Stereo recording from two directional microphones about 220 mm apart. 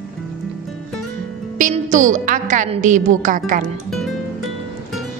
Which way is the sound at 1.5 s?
35° right (ahead or behind).